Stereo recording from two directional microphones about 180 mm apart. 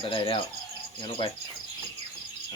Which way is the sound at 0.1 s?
30° left (ahead or behind).